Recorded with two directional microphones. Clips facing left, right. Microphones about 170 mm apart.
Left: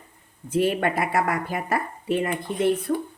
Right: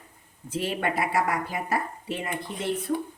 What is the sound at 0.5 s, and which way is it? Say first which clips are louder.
Speech: left 6 dB; 55° left (ahead or behind).